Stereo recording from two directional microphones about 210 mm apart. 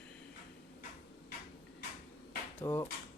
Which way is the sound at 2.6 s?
15° left (ahead or behind).